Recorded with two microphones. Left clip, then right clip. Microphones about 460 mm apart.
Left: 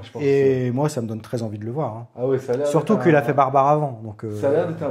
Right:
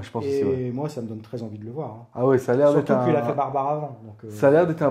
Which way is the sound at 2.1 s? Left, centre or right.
Right.